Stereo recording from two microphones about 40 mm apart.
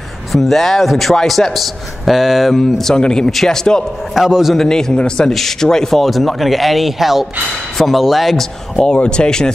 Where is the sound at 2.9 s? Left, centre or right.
Centre.